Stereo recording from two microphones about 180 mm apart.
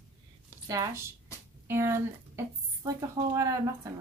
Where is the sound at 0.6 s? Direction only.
20° right (ahead or behind).